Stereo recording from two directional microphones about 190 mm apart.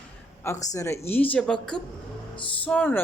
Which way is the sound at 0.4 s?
15° left (ahead or behind).